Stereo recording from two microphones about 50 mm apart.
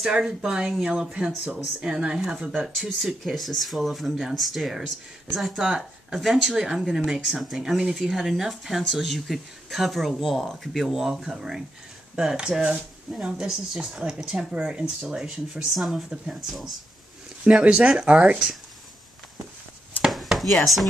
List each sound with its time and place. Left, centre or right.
0.1 s speech: centre
2.5 s speech: centre
15.7 s speech: centre
17.5 s speech: centre
20.1 s chopping: centre